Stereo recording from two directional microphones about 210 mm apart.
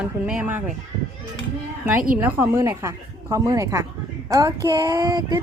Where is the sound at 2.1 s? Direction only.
10° right (ahead or behind).